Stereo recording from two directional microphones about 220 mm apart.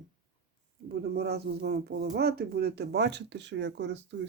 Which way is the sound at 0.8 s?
45° right (ahead or behind).